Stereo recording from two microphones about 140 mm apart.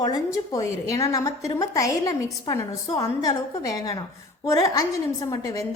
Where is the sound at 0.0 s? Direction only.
25° left (ahead or behind).